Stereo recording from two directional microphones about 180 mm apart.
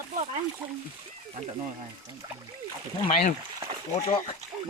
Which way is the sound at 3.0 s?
45° left (ahead or behind).